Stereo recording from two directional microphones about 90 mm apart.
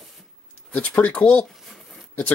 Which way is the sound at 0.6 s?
10° left (ahead or behind).